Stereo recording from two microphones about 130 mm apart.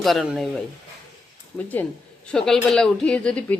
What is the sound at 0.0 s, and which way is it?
Speech, centre (ahead or behind).